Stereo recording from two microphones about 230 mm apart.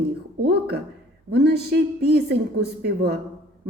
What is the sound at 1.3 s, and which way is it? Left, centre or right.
Speech, right.